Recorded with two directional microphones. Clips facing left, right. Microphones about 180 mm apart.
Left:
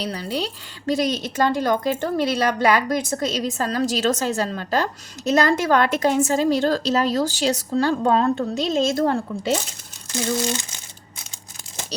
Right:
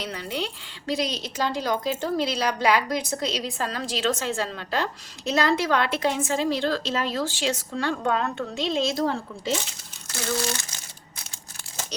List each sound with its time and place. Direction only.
0.0 s speech: 35° left (ahead or behind); by 9.5 s 55° left (ahead or behind)
10.1 s crumpling: 20° left (ahead or behind)